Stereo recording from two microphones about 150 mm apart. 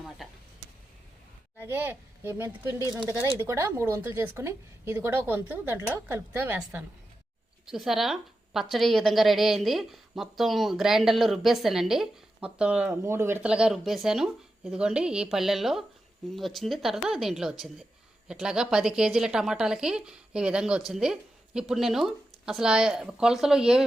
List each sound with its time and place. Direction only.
1.5 s a woman's voice: 15° right (ahead or behind)